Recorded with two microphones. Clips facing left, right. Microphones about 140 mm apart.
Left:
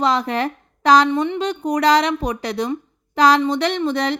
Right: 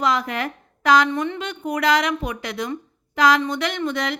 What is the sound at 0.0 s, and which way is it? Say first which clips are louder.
A woman's voice: left 3 dB; 35° left (ahead or behind).